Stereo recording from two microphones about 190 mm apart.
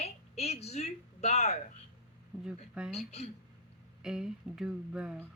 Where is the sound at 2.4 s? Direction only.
5° right (ahead or behind).